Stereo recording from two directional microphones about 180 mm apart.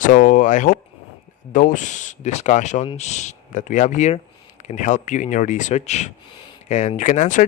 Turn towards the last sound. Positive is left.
turn(degrees=45)  # may be behind; listen again after turning